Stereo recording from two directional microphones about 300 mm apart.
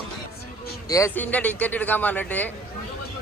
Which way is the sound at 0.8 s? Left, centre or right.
Centre.